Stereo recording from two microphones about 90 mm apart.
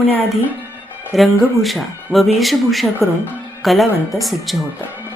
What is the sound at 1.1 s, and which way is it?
Speech, centre (ahead or behind).